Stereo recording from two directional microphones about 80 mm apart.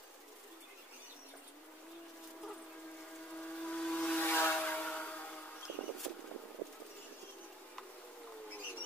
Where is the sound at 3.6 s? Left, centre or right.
Centre.